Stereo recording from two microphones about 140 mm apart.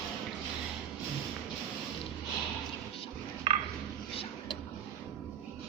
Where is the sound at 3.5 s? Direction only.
40° right (ahead or behind).